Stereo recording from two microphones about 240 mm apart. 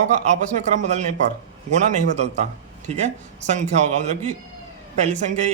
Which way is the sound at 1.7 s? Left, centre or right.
Right.